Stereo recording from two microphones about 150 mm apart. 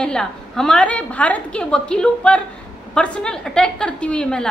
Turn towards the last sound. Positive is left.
turn(degrees=5)  # may be behind; listen again after turning